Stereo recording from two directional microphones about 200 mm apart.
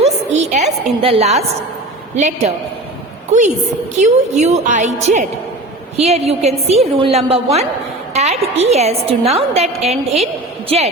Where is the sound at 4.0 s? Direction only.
35° right (ahead or behind).